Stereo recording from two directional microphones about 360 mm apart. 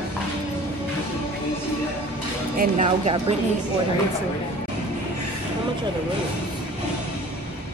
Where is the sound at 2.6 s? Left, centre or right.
Centre.